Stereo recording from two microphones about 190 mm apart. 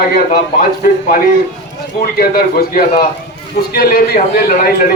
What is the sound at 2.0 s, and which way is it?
A man's voice, 50° left (ahead or behind).